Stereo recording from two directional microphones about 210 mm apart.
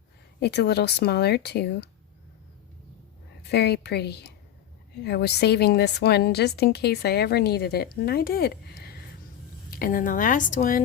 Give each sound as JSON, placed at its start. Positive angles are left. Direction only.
{"t": 0.3, "sound": "a woman's voice", "side_deg": 50}
{"t": 3.5, "sound": "a woman's voice", "side_deg": 50}